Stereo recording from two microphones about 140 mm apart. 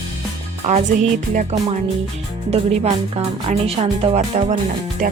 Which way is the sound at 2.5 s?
45° right (ahead or behind).